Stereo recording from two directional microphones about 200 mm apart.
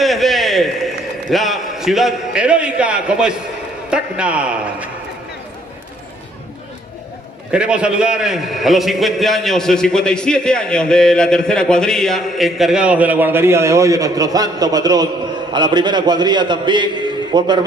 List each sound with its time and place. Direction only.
0.0 s a sound: centre (ahead or behind)
1.3 s a man's voice: centre (ahead or behind)
7.5 s a man's voice: 5° right (ahead or behind); by 17.6 s 20° right (ahead or behind)